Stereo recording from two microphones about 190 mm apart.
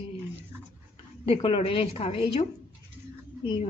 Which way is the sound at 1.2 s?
30° left (ahead or behind).